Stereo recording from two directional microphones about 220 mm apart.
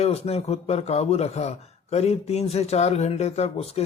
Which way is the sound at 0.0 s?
30° left (ahead or behind).